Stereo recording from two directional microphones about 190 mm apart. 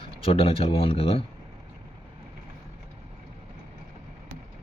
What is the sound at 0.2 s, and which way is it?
Speech, 30° left (ahead or behind).